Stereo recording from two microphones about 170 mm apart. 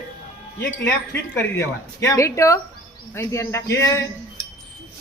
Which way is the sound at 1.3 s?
15° left (ahead or behind).